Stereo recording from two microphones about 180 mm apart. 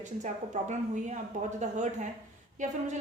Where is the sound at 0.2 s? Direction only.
40° right (ahead or behind).